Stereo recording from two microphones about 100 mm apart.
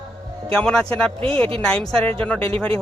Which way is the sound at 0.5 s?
10° left (ahead or behind).